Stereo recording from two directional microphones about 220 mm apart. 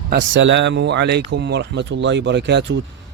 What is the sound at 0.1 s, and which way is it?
Speech, 55° right (ahead or behind).